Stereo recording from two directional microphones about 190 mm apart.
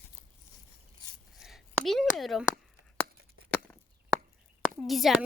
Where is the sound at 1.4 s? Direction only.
Centre (ahead or behind).